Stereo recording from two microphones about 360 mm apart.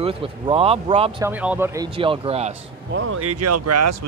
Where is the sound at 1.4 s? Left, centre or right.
Centre.